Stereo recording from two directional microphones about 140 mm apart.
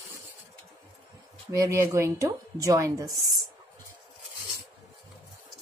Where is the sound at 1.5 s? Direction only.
20° right (ahead or behind).